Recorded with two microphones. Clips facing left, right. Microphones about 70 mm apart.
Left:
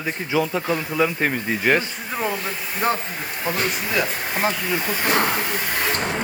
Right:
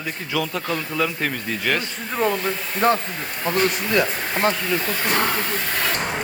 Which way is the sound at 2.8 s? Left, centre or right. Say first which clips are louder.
Right 4 dB; centre.